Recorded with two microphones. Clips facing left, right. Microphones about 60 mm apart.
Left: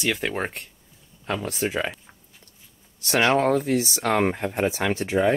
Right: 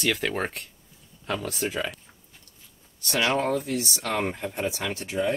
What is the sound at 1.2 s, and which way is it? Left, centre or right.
Speech, left.